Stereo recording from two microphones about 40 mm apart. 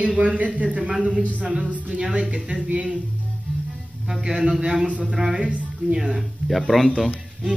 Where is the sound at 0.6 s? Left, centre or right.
Right.